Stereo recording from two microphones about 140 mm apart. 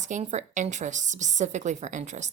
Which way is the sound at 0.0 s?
55° right (ahead or behind).